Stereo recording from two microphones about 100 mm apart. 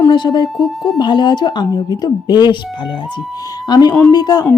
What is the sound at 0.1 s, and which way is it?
Speech, 50° left (ahead or behind).